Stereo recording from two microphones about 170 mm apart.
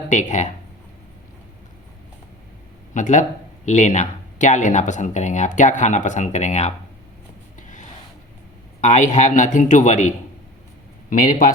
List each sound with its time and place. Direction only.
0.1 s speech: 45° left (ahead or behind)
2.9 s speech: 45° left (ahead or behind)
8.8 s speech: 45° left (ahead or behind)
11.1 s speech: 50° left (ahead or behind)